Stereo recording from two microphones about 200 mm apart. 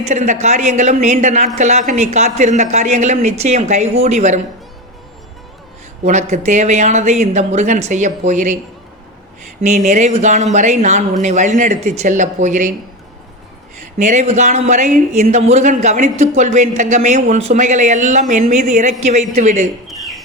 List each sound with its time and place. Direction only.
0.0 s speech: 35° right (ahead or behind)
6.1 s speech: 35° right (ahead or behind)
9.6 s speech: 35° right (ahead or behind)
14.0 s speech: 35° right (ahead or behind)
20.0 s chop: centre (ahead or behind)